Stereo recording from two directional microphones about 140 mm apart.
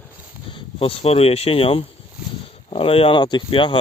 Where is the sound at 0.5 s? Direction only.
40° left (ahead or behind).